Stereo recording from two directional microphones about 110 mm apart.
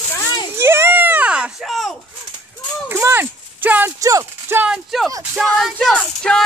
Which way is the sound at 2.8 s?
20° right (ahead or behind).